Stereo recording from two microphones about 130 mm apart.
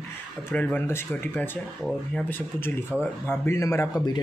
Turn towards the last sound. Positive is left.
turn(degrees=20)  # may be behind; listen again after turning